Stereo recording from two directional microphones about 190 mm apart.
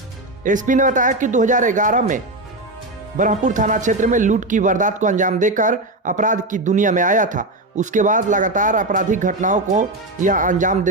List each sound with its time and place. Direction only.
0.4 s speech: 40° right (ahead or behind)